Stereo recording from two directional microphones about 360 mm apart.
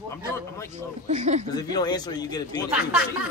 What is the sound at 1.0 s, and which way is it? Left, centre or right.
Speech, centre.